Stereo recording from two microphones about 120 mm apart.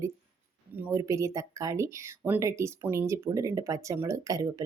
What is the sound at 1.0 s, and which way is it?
Speech, 25° right (ahead or behind).